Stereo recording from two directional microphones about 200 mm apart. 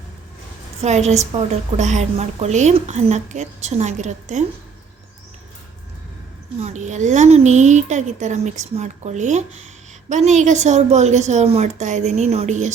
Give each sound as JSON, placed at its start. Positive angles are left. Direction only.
{"t": 0.8, "sound": "a woman's voice", "side_deg": -35}
{"t": 6.6, "sound": "a woman's voice", "side_deg": -35}